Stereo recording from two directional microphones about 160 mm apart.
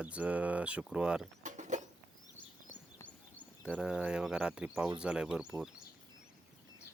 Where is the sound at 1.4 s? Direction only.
50° right (ahead or behind).